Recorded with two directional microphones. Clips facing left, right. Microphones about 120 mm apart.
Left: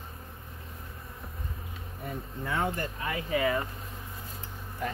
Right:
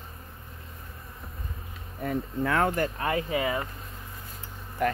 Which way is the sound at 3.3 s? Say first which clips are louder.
Even; 20° right (ahead or behind).